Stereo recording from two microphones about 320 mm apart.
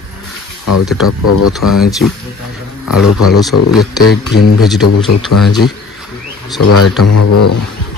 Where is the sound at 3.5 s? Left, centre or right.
Left.